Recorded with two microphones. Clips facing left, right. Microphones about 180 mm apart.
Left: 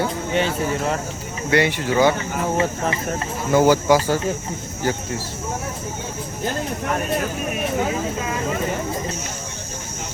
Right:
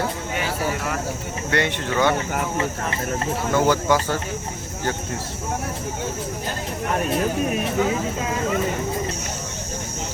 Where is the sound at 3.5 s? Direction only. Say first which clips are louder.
Left 5 dB; 10° left (ahead or behind).